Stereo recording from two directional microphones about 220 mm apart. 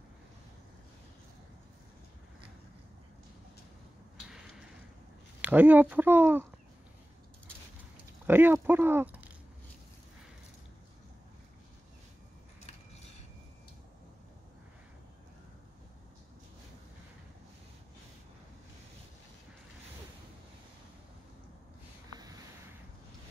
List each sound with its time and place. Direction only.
5.4 s speech: 10° right (ahead or behind)
8.3 s speech: 10° right (ahead or behind)
22.1 s a sound: 15° right (ahead or behind)